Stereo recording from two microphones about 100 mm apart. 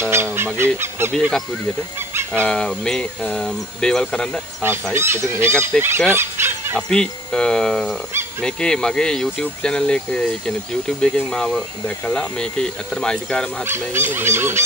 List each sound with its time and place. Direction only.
0.1 s goose: 25° right (ahead or behind)
0.6 s speech: 25° right (ahead or behind)
2.4 s speech: 10° left (ahead or behind)
4.6 s speech: 20° right (ahead or behind)
6.9 s speech: 5° left (ahead or behind)
13.7 s speech: 20° right (ahead or behind)